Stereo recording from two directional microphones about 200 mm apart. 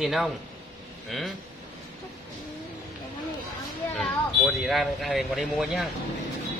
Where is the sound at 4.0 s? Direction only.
Centre (ahead or behind).